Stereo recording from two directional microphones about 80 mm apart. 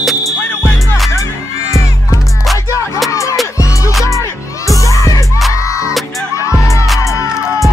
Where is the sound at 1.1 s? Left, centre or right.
Left.